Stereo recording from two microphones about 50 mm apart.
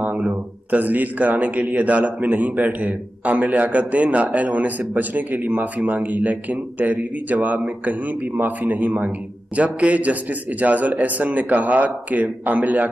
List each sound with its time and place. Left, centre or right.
0.0 s a man's voice: right